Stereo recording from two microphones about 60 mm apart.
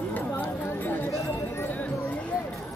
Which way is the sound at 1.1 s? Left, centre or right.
Left.